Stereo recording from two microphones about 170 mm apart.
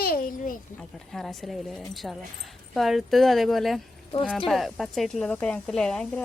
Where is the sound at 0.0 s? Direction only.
60° left (ahead or behind).